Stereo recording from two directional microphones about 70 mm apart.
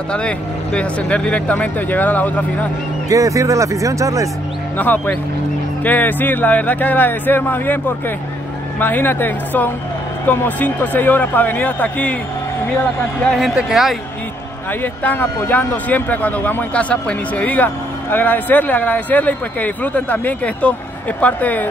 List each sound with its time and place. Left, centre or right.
0.7 s speech: centre
3.1 s speech: right
4.7 s speech: left
13.6 s speech: centre
14.8 s speech: left